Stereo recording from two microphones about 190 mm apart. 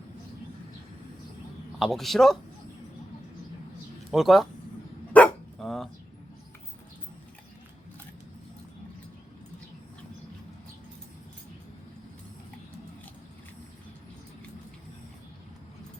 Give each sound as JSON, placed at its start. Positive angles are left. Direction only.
{"t": 1.8, "sound": "a man's voice", "side_deg": 0}
{"t": 4.1, "sound": "a man's voice", "side_deg": 0}
{"t": 5.1, "sound": "dog", "side_deg": 5}